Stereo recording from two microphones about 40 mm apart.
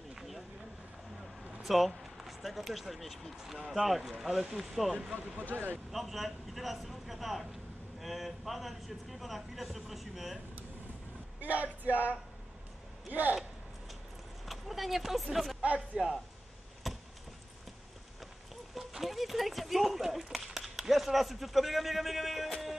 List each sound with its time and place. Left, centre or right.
0.1 s a sound: centre
1.6 s speech: centre
3.5 s speech: centre
3.8 s speech: centre
5.5 s speech: centre
5.9 s speech: centre
11.4 s speech: right
14.4 s a sound: centre
15.6 s speech: right
16.8 s a sound: centre
18.8 s speech: centre